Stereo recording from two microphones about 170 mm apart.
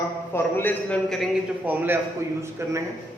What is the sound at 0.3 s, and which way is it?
A man's voice, 10° left (ahead or behind).